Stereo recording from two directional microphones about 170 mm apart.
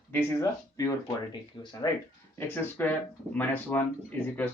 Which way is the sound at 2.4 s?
10° left (ahead or behind).